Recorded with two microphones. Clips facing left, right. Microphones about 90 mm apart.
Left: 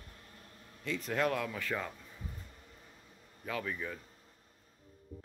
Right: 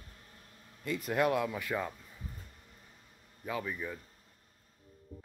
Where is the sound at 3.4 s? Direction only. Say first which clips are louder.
Right 1 dB; 10° right (ahead or behind).